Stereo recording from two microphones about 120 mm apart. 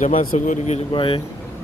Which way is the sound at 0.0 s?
75° left (ahead or behind).